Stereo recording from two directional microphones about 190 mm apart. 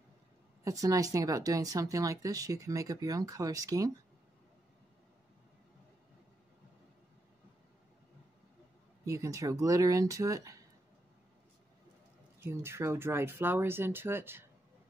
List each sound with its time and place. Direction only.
0.7 s speech: 15° right (ahead or behind)
9.0 s speech: 15° right (ahead or behind)
12.4 s speech: 15° right (ahead or behind)